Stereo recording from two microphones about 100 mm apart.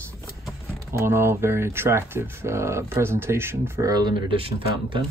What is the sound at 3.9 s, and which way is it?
Speech, 45° right (ahead or behind).